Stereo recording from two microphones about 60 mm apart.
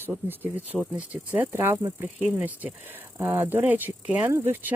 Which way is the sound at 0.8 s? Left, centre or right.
Right.